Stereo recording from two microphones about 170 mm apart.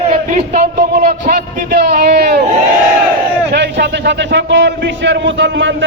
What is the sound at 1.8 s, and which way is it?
Speech, 70° right (ahead or behind).